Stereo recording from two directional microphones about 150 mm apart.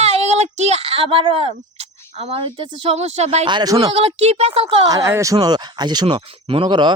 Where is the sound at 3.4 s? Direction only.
30° right (ahead or behind).